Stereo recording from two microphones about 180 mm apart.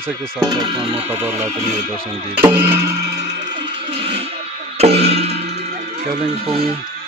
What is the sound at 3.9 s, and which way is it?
Music, 30° right (ahead or behind).